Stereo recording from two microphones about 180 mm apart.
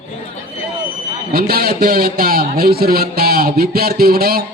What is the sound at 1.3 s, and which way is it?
Speech, 55° right (ahead or behind).